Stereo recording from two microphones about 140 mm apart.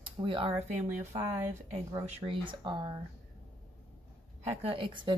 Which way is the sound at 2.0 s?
45° right (ahead or behind).